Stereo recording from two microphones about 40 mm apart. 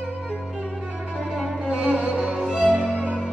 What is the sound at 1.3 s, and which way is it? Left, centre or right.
Music, centre.